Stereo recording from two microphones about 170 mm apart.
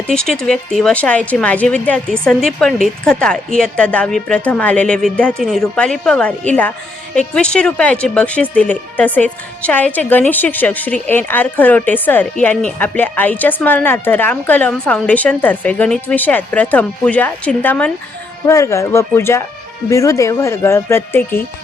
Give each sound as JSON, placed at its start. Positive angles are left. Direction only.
{"t": 0.1, "sound": "a woman's voice", "side_deg": 5}